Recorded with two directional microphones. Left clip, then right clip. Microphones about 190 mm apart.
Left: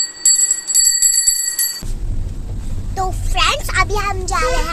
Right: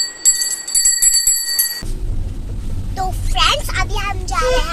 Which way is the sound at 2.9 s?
10° left (ahead or behind).